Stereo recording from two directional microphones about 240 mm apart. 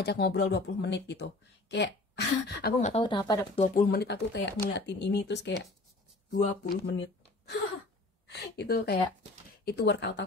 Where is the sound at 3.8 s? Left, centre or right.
Left.